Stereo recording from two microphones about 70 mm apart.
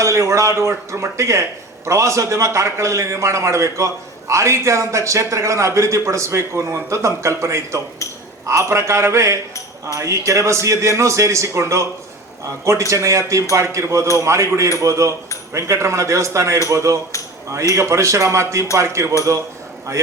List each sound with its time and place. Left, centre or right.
0.0 s speech: right
12.9 s speech: right